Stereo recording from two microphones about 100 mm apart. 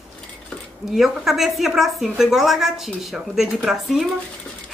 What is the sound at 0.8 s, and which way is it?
A woman's voice, 5° right (ahead or behind).